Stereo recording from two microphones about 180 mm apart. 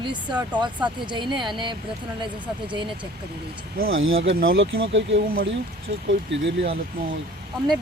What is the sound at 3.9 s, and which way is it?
Speech, 90° right.